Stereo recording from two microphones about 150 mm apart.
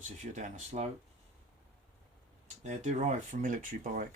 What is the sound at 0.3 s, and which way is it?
Speech, 55° right (ahead or behind).